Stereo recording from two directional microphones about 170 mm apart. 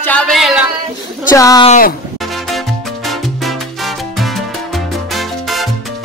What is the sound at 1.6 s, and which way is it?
Speech, 50° left (ahead or behind).